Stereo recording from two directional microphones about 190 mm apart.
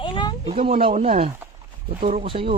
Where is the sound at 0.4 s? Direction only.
30° right (ahead or behind).